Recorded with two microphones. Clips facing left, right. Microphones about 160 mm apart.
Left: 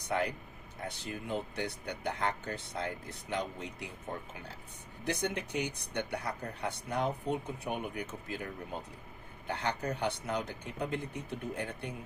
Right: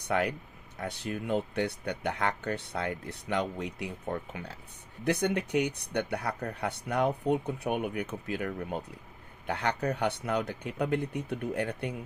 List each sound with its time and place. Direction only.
0.1 s speech: 70° right (ahead or behind)
5.0 s speech: 65° right (ahead or behind)